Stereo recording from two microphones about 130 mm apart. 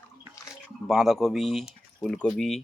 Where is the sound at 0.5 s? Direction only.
Centre (ahead or behind).